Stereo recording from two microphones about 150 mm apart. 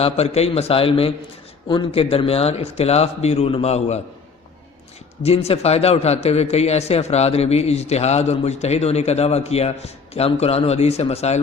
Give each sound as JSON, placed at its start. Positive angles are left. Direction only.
{"t": 0.0, "sound": "speech", "side_deg": 45}
{"t": 5.2, "sound": "speech", "side_deg": 40}